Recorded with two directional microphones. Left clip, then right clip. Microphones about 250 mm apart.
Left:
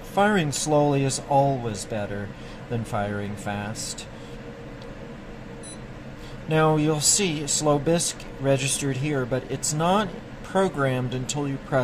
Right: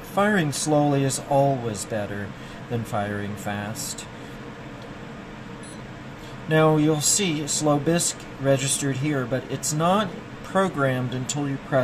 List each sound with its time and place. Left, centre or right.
0.1 s speech: centre
6.5 s speech: centre